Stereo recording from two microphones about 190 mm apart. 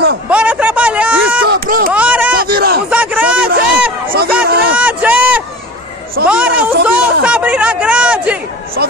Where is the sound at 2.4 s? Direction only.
55° right (ahead or behind).